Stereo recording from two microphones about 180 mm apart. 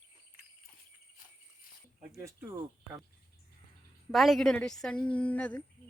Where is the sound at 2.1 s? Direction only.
15° right (ahead or behind).